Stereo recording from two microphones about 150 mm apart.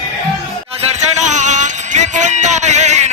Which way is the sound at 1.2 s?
55° right (ahead or behind).